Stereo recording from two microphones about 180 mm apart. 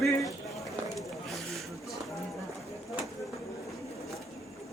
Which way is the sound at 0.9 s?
Centre (ahead or behind).